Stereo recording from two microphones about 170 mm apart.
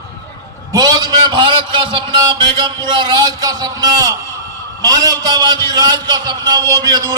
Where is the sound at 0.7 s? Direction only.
25° right (ahead or behind).